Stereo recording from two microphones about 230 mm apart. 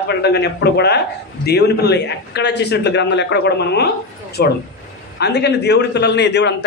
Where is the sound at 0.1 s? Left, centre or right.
Left.